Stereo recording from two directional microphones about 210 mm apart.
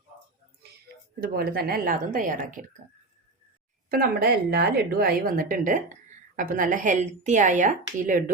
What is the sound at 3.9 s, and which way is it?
A woman's voice, 45° right (ahead or behind).